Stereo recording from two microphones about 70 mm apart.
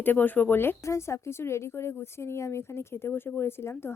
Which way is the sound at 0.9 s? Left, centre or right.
Left.